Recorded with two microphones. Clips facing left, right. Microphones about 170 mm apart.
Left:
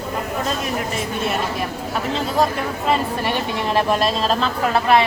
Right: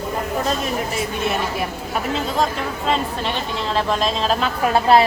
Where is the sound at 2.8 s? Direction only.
10° left (ahead or behind).